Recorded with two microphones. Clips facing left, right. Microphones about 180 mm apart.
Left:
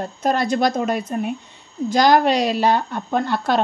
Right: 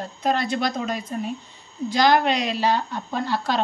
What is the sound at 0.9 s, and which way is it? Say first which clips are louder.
Speech: left 5 dB; 60° left (ahead or behind).